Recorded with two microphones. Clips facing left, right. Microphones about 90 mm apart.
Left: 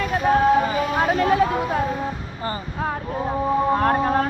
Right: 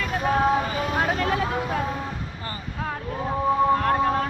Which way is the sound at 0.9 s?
20° left (ahead or behind).